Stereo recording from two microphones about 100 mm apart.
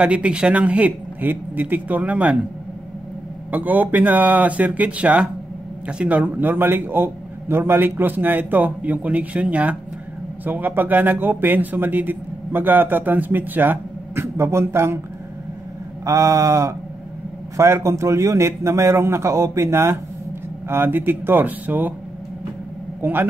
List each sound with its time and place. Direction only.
0.0 s a man's voice: 10° right (ahead or behind)
3.5 s a man's voice: 15° right (ahead or behind)
16.1 s a sound: 30° right (ahead or behind)
17.6 s speech: 25° right (ahead or behind)
23.0 s speech: 20° right (ahead or behind)